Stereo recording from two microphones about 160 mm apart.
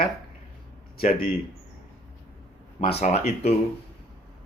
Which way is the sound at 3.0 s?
45° left (ahead or behind).